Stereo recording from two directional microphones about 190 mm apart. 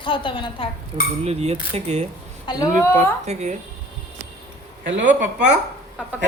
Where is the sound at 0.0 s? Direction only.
25° left (ahead or behind).